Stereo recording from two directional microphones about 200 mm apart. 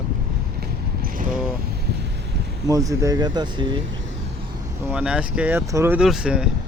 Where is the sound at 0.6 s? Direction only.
50° right (ahead or behind).